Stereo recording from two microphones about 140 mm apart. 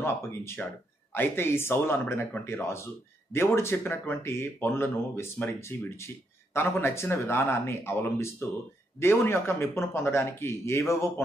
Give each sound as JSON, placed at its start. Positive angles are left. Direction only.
{"t": 0.0, "sound": "speech", "side_deg": 15}